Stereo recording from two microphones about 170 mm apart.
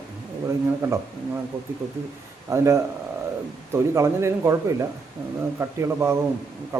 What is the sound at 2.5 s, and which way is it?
Speech, 20° right (ahead or behind).